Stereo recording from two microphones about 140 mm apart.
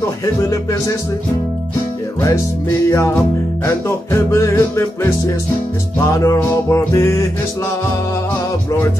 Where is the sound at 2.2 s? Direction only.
20° left (ahead or behind).